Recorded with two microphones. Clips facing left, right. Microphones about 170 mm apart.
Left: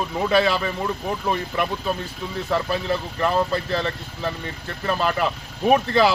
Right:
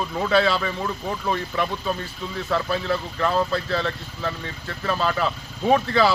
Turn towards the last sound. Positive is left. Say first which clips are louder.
# left 1 dB
turn(degrees=15)  # may be behind; listen again after turning